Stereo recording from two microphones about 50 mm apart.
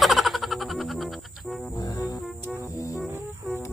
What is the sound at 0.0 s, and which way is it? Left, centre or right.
Music, centre.